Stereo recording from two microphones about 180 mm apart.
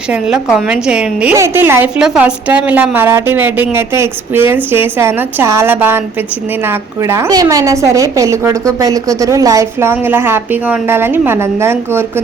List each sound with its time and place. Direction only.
0.5 s a woman's voice: 5° right (ahead or behind)